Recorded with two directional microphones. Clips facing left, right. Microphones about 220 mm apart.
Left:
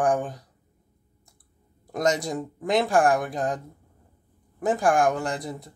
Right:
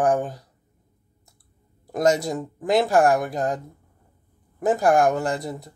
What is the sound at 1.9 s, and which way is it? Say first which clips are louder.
Speech: right 4 dB; centre (ahead or behind).